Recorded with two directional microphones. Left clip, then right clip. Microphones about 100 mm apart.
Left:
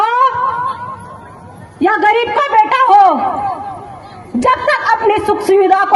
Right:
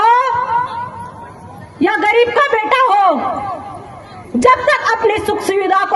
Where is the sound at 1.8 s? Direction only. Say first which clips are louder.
Left 1 dB; 60° right (ahead or behind); by 3.5 s 40° right (ahead or behind).